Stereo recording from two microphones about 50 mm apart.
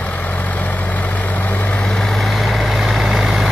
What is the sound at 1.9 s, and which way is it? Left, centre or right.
Vehicle, centre.